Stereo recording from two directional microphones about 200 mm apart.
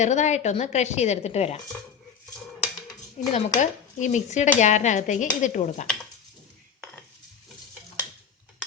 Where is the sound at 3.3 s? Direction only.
35° left (ahead or behind).